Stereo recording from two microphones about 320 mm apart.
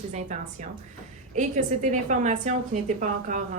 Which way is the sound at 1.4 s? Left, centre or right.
Right.